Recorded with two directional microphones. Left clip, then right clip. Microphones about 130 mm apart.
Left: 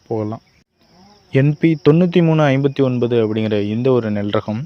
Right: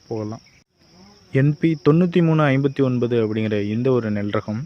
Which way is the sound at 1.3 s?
20° left (ahead or behind).